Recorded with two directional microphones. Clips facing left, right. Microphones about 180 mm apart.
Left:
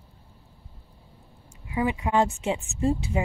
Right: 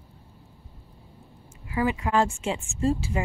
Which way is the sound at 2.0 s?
20° left (ahead or behind).